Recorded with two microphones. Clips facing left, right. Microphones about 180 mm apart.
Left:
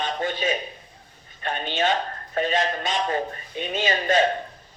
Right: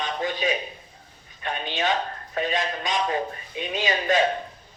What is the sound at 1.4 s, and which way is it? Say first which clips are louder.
A man's voice: left 2 dB; 45° left (ahead or behind).